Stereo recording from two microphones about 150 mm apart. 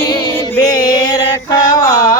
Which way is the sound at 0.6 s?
25° left (ahead or behind).